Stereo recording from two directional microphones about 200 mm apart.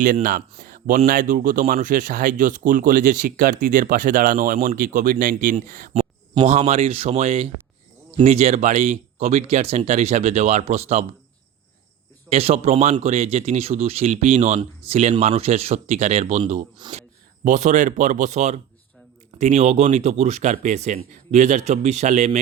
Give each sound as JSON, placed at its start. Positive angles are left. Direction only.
{"t": 0.0, "sound": "speech", "side_deg": -45}
{"t": 12.3, "sound": "speech", "side_deg": -30}